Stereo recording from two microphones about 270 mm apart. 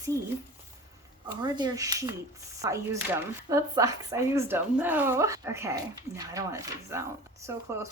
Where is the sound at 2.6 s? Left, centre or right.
Centre.